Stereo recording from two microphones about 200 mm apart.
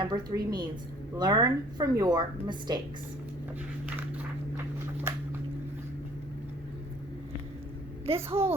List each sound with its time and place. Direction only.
0.0 s a woman's voice: 20° right (ahead or behind)
8.0 s a child's voice: 30° right (ahead or behind)